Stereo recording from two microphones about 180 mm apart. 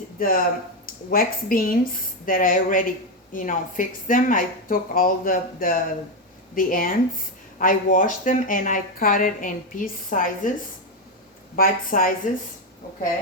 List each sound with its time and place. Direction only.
0.2 s speech: 50° left (ahead or behind)
11.5 s speech: 50° left (ahead or behind)